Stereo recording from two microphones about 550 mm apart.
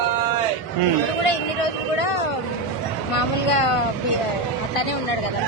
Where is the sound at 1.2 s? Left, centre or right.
Left.